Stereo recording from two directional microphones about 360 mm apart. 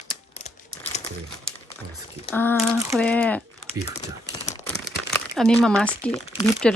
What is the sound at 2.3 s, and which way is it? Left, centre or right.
Speech, centre.